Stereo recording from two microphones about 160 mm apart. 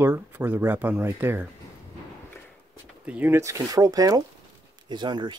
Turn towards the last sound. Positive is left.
turn(degrees=-30)  # may be behind; listen again after turning